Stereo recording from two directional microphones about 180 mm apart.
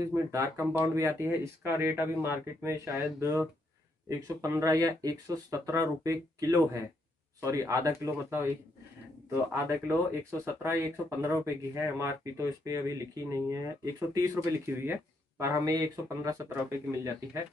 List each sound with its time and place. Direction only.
0.1 s speech: 15° right (ahead or behind)
4.4 s speech: 15° right (ahead or behind)